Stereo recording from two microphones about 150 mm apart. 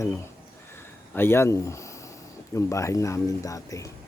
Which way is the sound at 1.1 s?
15° left (ahead or behind).